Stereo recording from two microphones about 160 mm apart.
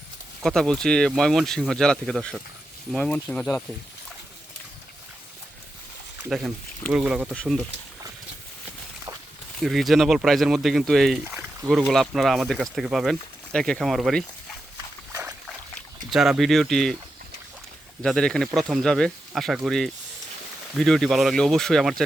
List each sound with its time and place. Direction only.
0.4 s speech: centre (ahead or behind)
6.2 s speech: 5° right (ahead or behind)
9.6 s speech: centre (ahead or behind)
15.1 s dog: 15° right (ahead or behind)
15.4 s a sound: centre (ahead or behind)
18.0 s speech: 5° left (ahead or behind)